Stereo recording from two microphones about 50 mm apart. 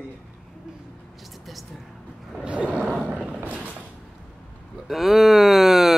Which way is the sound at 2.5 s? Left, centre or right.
Right.